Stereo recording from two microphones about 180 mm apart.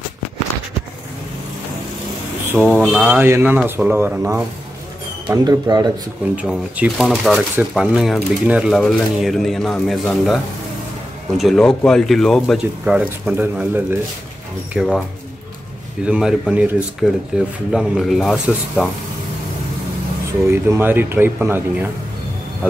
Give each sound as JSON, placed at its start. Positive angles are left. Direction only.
{"t": 2.6, "sound": "speech", "side_deg": -5}
{"t": 5.3, "sound": "speech", "side_deg": -20}
{"t": 6.3, "sound": "speech", "side_deg": -5}
{"t": 14.7, "sound": "speech", "side_deg": 0}
{"t": 16.1, "sound": "speech", "side_deg": -5}
{"t": 20.4, "sound": "speech", "side_deg": -15}